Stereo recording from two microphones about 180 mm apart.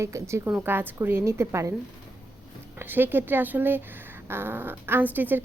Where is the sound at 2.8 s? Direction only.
10° right (ahead or behind).